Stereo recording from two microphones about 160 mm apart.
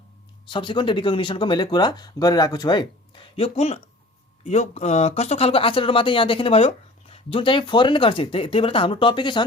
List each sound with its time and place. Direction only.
0.4 s speech: 30° left (ahead or behind)